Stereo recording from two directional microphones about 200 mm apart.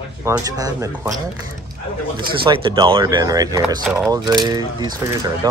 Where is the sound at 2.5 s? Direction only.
25° right (ahead or behind).